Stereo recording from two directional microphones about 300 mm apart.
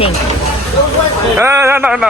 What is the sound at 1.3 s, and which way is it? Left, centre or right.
Speech, centre.